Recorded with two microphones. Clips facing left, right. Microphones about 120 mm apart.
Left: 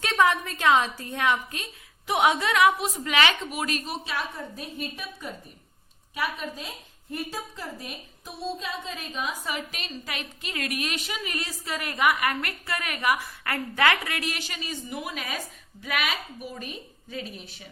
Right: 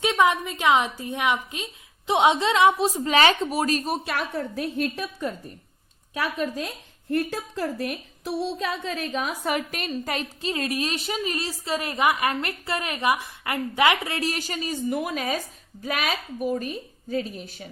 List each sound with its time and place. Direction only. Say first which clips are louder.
0.0 s a woman's voice: right 2 dB; 15° right (ahead or behind); by 3.9 s 40° right (ahead or behind)
4.0 s a woman's voice: right 5 dB; 60° right (ahead or behind); by 5.3 s 85° right
7.1 s a woman's voice: right 8 dB; 70° right (ahead or behind); by 17.7 s 45° right (ahead or behind)